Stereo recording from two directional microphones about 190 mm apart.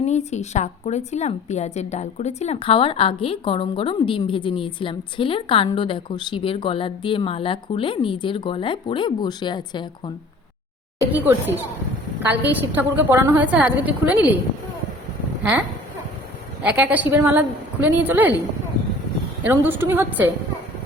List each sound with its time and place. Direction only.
0.0 s a woman's voice: 35° left (ahead or behind)
11.1 s a woman's voice: 10° right (ahead or behind)
16.6 s a woman's voice: 10° right (ahead or behind)
19.5 s a woman's voice: 10° right (ahead or behind)